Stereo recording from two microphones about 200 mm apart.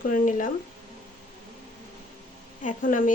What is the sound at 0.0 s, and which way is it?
Speech, 40° left (ahead or behind).